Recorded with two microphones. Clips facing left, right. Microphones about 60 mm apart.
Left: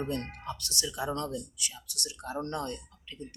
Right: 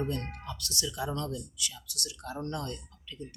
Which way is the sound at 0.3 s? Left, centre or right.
Left.